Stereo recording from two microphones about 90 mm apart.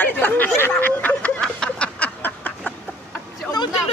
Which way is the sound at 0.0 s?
20° left (ahead or behind).